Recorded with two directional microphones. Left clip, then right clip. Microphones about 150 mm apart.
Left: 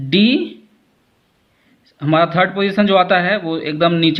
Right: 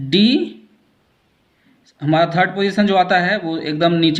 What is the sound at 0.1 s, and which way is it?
Speech, 25° left (ahead or behind).